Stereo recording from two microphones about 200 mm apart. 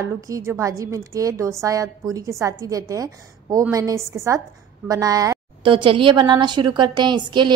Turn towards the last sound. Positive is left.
turn(degrees=-20)  # may be behind; listen again after turning